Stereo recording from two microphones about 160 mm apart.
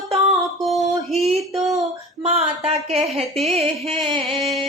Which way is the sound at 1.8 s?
40° right (ahead or behind).